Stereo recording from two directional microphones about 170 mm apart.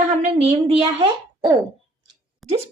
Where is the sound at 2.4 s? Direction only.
Centre (ahead or behind).